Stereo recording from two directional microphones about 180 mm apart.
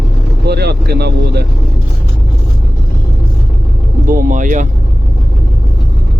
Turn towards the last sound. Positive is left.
turn(degrees=-45)  # may be behind; listen again after turning